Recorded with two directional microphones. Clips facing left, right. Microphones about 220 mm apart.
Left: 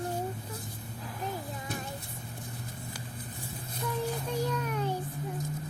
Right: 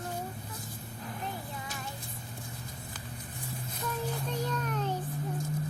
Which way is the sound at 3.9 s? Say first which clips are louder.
Left 2 dB; 10° left (ahead or behind).